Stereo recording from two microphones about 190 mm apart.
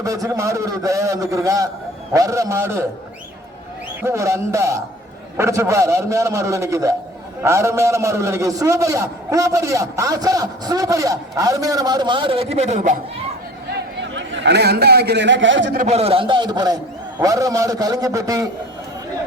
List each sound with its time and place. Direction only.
0.0 s a man's voice: 15° right (ahead or behind)
4.0 s a man's voice: 15° right (ahead or behind); by 13.0 s 40° right (ahead or behind)
13.7 s a man's voice: 75° right (ahead or behind)
15.8 s a man's voice: 35° right (ahead or behind); by 18.4 s 15° right (ahead or behind)